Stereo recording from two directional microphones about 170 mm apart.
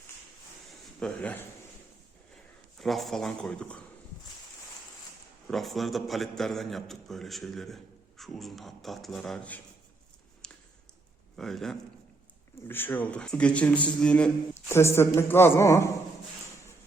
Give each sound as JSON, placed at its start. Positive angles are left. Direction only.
{"t": 0.9, "sound": "a man's voice", "side_deg": 5}
{"t": 5.5, "sound": "a man's voice", "side_deg": 0}
{"t": 10.4, "sound": "a sound", "side_deg": 5}
{"t": 11.3, "sound": "a man's voice", "side_deg": 0}
{"t": 12.6, "sound": "a man's voice", "side_deg": 10}